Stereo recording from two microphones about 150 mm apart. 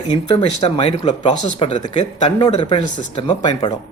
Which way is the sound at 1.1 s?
30° left (ahead or behind).